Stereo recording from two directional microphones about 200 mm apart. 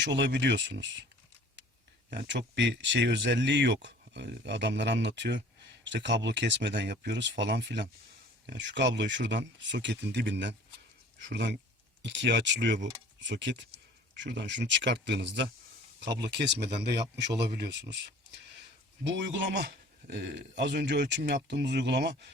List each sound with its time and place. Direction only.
0.0 s speech: 60° right (ahead or behind)
2.0 s speech: 60° right (ahead or behind)